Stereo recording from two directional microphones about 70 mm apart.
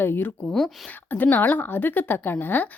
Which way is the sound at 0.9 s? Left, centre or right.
Left.